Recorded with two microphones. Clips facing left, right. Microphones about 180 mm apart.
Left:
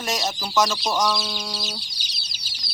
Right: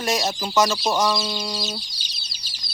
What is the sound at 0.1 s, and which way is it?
Speech, centre (ahead or behind).